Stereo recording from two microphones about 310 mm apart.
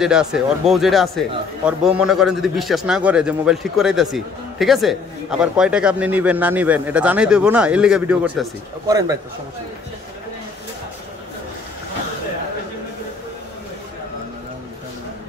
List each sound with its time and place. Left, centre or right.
0.0 s speech: centre